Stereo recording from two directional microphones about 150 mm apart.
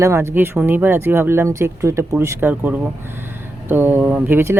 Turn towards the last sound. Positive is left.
turn(degrees=-15)  # may be behind; listen again after turning